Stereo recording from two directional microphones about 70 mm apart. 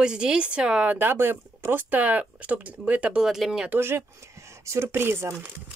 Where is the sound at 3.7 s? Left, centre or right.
Right.